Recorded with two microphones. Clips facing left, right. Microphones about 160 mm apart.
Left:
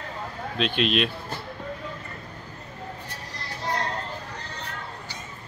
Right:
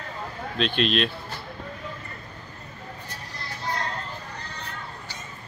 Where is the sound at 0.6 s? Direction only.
5° left (ahead or behind).